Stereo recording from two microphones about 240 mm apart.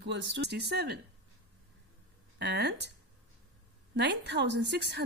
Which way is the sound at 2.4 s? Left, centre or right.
Right.